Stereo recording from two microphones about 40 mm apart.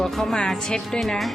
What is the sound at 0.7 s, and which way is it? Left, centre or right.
Speech, centre.